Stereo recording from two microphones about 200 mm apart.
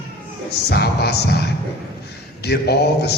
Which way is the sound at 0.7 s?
55° left (ahead or behind).